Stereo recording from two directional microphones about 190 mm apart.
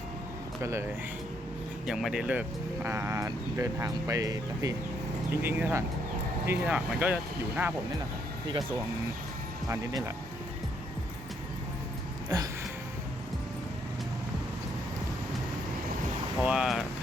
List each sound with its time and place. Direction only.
0.6 s speech: 15° right (ahead or behind)
1.9 s speech: centre (ahead or behind)
12.3 s a sound: 20° right (ahead or behind)
16.4 s vehicle: 5° right (ahead or behind)